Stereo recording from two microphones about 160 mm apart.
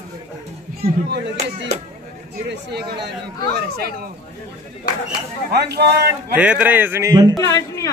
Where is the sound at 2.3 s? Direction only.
90° right.